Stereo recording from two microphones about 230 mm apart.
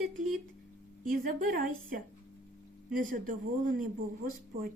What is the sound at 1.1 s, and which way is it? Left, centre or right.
Speech, right.